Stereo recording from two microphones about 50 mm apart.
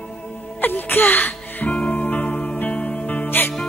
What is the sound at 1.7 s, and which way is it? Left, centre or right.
Music, left.